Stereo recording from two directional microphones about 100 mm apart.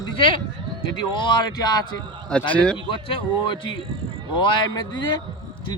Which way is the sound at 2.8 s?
60° left (ahead or behind).